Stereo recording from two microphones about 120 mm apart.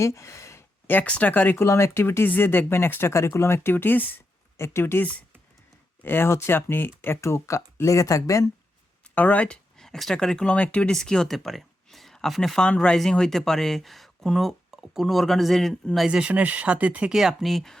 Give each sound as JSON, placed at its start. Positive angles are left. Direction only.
{"t": 0.0, "sound": "speech", "side_deg": 25}
{"t": 9.1, "sound": "speech", "side_deg": 10}
{"t": 16.0, "sound": "speech", "side_deg": -10}